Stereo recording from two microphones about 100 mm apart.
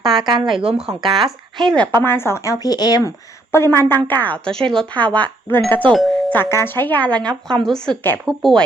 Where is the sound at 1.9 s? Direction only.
25° left (ahead or behind); by 3.1 s 45° left (ahead or behind).